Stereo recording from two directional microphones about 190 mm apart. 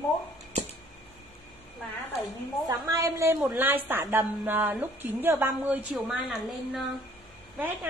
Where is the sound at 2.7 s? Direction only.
15° right (ahead or behind).